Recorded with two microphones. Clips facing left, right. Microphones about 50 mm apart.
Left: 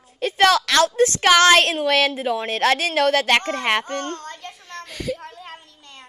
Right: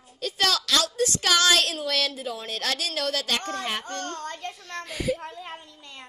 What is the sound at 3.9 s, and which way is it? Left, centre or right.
Speech, left.